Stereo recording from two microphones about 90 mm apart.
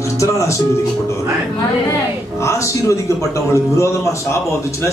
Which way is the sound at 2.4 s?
35° left (ahead or behind).